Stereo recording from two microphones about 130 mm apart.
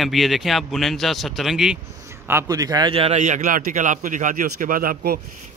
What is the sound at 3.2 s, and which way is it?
Speech, 85° right.